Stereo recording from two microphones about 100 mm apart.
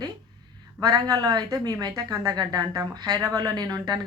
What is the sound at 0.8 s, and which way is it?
A woman's voice, 40° right (ahead or behind).